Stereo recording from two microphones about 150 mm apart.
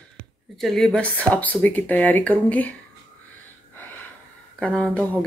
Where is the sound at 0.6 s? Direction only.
5° left (ahead or behind).